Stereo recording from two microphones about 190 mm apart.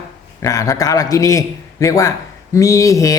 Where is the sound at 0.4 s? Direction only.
15° left (ahead or behind).